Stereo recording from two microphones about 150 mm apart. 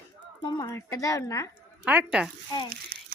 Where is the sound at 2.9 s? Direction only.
85° right.